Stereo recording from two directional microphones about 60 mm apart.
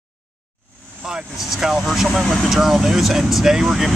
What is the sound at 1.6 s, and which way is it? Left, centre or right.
Speech, centre.